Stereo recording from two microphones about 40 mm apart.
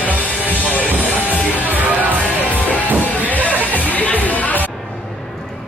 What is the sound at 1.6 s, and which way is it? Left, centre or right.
Music, right.